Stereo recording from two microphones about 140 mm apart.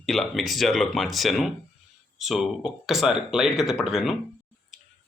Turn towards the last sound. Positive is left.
turn(degrees=0)  # may be behind; listen again after turning